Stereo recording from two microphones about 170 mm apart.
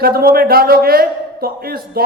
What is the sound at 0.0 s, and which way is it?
A man's voice, 60° right (ahead or behind).